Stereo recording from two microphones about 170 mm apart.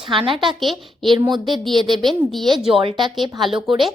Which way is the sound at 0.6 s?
Centre (ahead or behind).